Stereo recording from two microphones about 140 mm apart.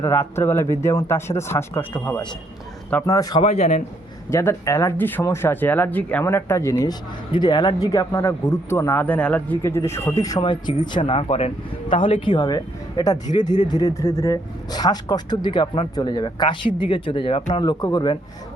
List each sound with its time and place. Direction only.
0.0 s speech: 15° left (ahead or behind)
2.9 s speech: 25° left (ahead or behind)
3.4 s a man's voice: 50° left (ahead or behind)
4.3 s speech: 20° left (ahead or behind)